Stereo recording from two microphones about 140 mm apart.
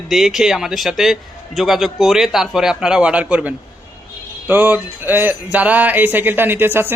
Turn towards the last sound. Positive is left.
turn(degrees=-15)  # may be behind; listen again after turning